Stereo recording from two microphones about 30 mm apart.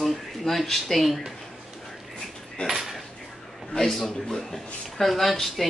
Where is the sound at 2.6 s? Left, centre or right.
Left.